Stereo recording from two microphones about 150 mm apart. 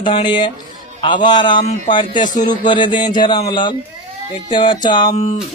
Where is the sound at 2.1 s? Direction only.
60° left (ahead or behind).